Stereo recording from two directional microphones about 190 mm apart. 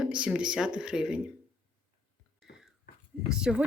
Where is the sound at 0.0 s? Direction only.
5° right (ahead or behind).